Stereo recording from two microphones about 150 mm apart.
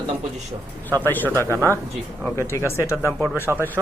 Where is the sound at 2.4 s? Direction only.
20° left (ahead or behind).